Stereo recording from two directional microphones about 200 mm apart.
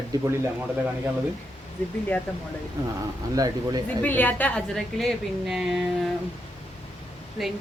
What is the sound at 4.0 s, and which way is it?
A woman's voice, 10° left (ahead or behind).